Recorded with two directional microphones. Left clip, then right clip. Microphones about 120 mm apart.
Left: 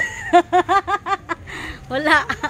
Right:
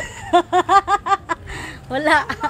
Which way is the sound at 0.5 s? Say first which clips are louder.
Right 2 dB; 25° left (ahead or behind).